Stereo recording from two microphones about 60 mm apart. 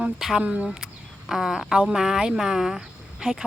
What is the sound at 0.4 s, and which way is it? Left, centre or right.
Speech, right.